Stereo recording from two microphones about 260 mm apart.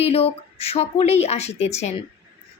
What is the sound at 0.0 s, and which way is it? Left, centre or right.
A woman's voice, left.